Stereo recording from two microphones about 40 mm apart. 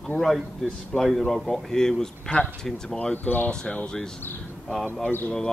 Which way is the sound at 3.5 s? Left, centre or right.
Centre.